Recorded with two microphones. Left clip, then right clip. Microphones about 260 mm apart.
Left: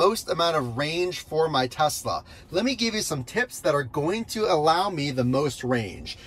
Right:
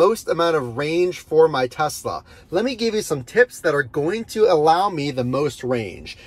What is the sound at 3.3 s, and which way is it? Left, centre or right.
Speech, centre.